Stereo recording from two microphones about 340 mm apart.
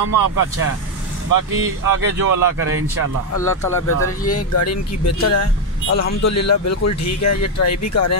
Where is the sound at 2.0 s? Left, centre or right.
Right.